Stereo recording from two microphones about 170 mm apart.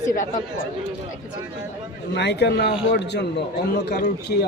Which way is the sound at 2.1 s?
85° left.